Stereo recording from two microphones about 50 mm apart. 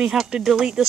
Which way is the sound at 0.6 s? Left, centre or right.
Centre.